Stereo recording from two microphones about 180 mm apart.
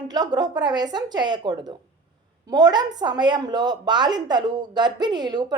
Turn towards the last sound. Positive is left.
turn(degrees=-25)  # may be behind; listen again after turning